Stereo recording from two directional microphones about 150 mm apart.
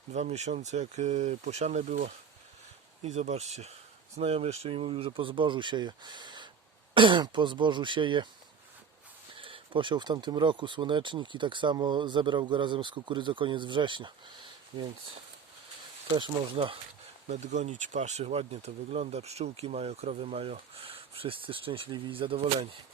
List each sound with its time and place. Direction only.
0.1 s speech: 50° right (ahead or behind); by 8.3 s 35° right (ahead or behind)
9.3 s speech: 35° right (ahead or behind)
16.1 s speech: 35° right (ahead or behind)
17.2 s speech: 50° right (ahead or behind)